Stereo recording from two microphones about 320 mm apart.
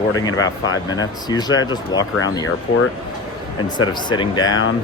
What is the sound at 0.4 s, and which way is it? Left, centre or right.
Speech, centre.